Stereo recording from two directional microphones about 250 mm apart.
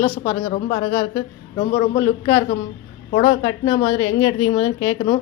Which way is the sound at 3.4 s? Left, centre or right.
Centre.